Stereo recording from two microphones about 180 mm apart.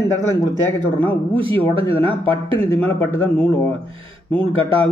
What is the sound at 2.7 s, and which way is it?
Speech, 10° left (ahead or behind).